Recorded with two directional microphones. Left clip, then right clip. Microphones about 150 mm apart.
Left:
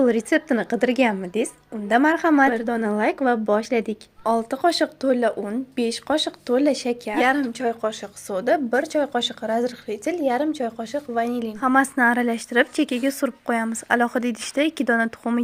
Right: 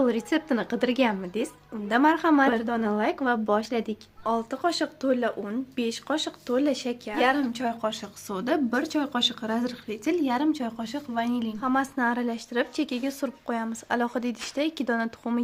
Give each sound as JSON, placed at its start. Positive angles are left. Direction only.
{"t": 0.0, "sound": "a woman's voice", "side_deg": 30}